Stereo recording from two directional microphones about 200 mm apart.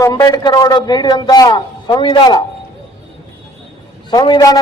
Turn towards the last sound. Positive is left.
turn(degrees=20)  # may be behind; listen again after turning